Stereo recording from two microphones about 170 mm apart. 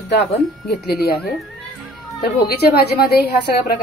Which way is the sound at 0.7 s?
70° left (ahead or behind).